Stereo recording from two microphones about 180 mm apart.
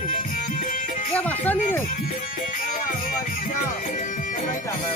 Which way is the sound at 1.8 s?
50° left (ahead or behind).